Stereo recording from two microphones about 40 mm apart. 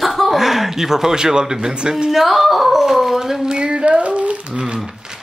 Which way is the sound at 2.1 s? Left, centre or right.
Centre.